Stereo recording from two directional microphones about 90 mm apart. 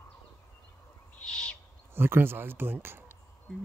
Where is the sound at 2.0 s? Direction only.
25° right (ahead or behind).